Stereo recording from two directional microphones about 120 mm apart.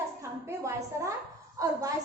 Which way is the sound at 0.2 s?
25° right (ahead or behind).